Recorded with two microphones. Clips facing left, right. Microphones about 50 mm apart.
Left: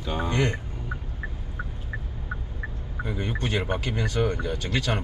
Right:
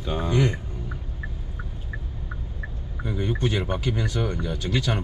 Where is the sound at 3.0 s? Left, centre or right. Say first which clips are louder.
Right 3 dB; centre.